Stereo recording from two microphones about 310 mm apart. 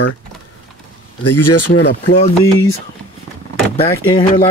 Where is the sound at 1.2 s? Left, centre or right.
Left.